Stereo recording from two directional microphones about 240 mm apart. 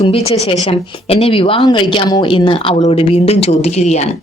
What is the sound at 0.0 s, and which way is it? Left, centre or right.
A woman's voice, left.